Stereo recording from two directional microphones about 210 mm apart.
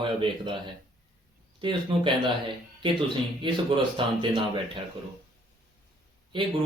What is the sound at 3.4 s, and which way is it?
Speech, 20° right (ahead or behind).